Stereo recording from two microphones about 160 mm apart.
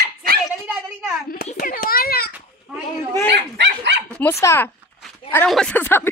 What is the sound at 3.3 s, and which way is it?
Dog, 90° right.